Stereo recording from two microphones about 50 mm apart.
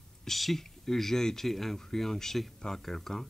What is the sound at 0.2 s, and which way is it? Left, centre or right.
Speech, centre.